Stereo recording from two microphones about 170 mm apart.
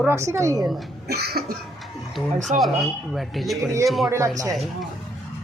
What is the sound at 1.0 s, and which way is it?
Cough, 70° right (ahead or behind).